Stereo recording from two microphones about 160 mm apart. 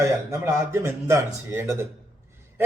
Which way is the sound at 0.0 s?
20° right (ahead or behind).